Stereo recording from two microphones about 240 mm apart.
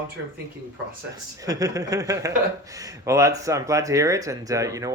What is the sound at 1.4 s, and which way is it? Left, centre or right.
Speech, centre.